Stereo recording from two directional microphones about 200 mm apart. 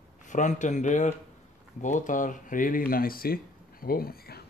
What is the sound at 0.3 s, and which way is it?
Speech, 40° left (ahead or behind).